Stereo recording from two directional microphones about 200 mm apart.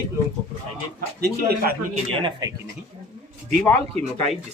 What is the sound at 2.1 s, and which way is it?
Speech, 25° right (ahead or behind).